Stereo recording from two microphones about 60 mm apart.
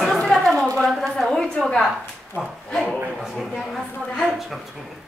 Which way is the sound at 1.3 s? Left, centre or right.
Centre.